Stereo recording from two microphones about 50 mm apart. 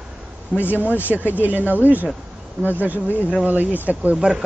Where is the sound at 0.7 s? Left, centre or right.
Left.